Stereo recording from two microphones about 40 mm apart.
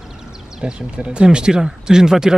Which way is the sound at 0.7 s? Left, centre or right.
Right.